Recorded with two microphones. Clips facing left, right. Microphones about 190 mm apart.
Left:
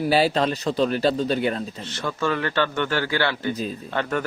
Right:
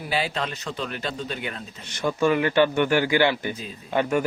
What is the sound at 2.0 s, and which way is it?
Speech, 15° right (ahead or behind).